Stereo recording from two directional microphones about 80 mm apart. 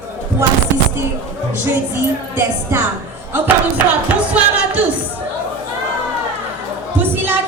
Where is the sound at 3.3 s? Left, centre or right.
Right.